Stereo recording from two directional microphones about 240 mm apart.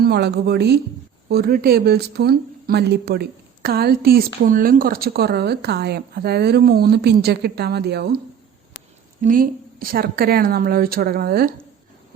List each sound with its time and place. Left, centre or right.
0.0 s a woman's voice: right
9.2 s speech: right